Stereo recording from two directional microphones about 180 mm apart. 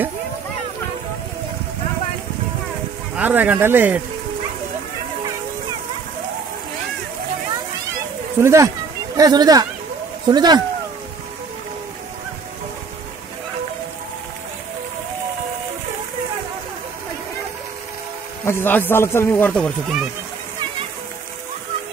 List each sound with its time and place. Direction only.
3.2 s speech: 10° right (ahead or behind)
8.4 s speech: 15° right (ahead or behind)
18.4 s a man's voice: 15° left (ahead or behind)